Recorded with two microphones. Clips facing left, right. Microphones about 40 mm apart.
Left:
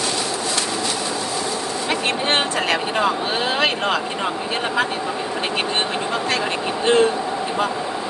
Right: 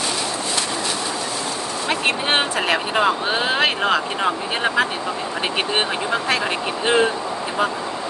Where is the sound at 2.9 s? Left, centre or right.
Centre.